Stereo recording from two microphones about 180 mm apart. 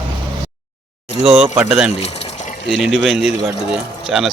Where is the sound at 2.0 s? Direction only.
35° left (ahead or behind).